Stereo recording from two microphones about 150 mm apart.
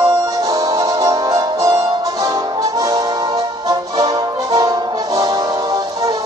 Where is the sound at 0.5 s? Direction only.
25° right (ahead or behind).